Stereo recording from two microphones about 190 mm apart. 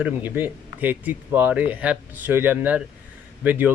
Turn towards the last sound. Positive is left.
turn(degrees=-10)  # may be behind; listen again after turning